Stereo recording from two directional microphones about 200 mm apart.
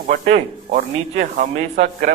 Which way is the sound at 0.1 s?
40° right (ahead or behind).